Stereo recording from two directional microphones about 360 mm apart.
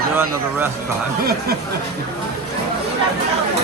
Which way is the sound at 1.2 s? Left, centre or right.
Right.